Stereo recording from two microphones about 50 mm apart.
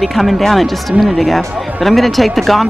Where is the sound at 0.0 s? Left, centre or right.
Centre.